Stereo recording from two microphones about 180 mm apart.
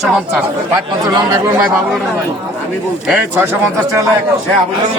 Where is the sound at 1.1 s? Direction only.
25° right (ahead or behind).